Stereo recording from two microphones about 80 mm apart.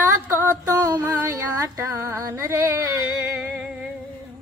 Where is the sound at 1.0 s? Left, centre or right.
Right.